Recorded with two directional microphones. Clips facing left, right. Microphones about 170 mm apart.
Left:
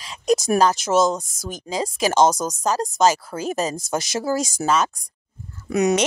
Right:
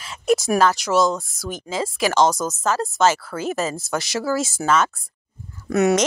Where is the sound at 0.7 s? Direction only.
20° left (ahead or behind).